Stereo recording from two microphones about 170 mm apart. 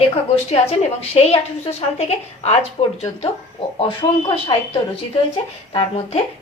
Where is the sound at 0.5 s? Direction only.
35° left (ahead or behind).